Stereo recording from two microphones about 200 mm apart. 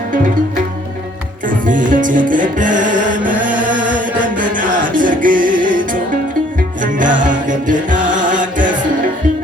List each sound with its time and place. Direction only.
1.5 s music: 40° right (ahead or behind)
4.4 s music: 40° right (ahead or behind)